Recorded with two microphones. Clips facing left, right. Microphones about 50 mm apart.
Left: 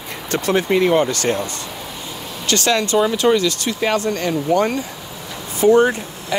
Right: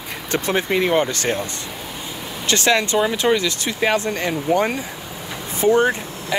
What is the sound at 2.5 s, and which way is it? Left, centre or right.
Speech, right.